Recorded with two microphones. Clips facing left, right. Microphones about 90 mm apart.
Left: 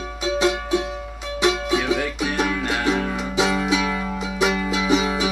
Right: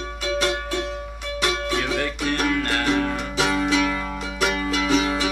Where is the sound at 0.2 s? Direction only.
20° left (ahead or behind).